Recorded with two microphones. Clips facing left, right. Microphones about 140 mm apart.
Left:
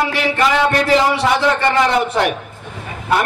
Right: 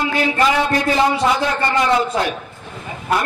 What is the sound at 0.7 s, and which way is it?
Speech, 75° left (ahead or behind).